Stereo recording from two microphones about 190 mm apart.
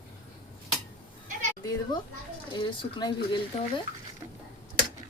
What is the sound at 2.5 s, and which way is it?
Speech, 25° left (ahead or behind).